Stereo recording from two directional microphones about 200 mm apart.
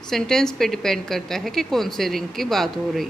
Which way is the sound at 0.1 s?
5° left (ahead or behind).